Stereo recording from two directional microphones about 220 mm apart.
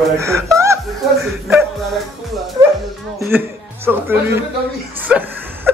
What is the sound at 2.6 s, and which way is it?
Bow-wow, 20° right (ahead or behind).